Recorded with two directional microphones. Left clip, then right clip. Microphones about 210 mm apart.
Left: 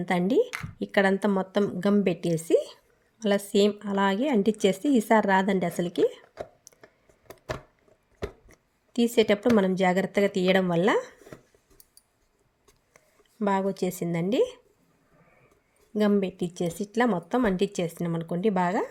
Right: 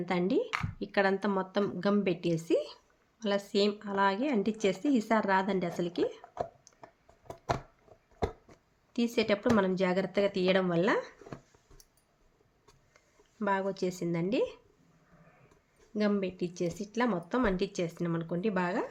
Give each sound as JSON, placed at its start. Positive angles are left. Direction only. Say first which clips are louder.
{"t": 0.0, "sound": "speech", "louder": "left 6 dB", "side_deg": 30}
{"t": 6.7, "sound": "a sound", "louder": "left 6 dB", "side_deg": 30}
{"t": 8.4, "sound": "speech", "louder": "left 1 dB", "side_deg": 30}
{"t": 13.4, "sound": "speech", "louder": "left 5 dB", "side_deg": 30}
{"t": 16.0, "sound": "speech", "louder": "left 6 dB", "side_deg": 30}